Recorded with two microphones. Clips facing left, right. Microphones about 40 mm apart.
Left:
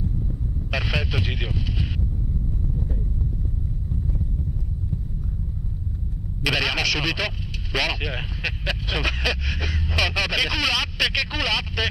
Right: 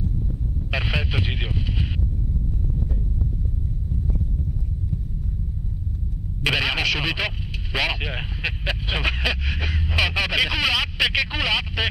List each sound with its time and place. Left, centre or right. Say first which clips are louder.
0.7 s speech: even; right
6.4 s speech: right 1 dB; right